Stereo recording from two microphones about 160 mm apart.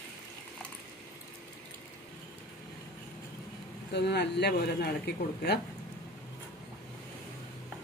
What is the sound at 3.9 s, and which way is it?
Speech, 90° left.